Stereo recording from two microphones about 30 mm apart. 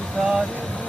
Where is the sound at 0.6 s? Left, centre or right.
Left.